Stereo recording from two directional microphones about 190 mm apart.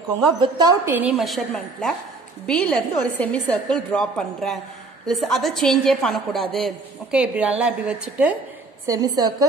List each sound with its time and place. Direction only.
0.4 s a woman's voice: 20° right (ahead or behind)
8.8 s a woman's voice: 20° right (ahead or behind)